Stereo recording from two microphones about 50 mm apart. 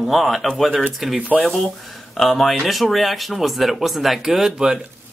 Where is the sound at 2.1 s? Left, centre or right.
Centre.